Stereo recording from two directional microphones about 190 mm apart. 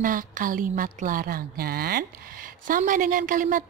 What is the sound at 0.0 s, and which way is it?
A woman's voice, 45° right (ahead or behind).